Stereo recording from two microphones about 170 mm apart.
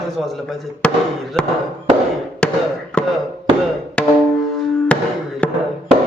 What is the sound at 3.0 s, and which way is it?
Music, 5° left (ahead or behind).